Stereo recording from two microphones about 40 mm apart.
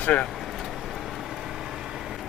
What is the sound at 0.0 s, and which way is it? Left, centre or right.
Speech, left.